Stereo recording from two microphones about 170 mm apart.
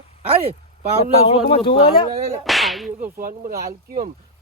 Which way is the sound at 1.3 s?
35° left (ahead or behind).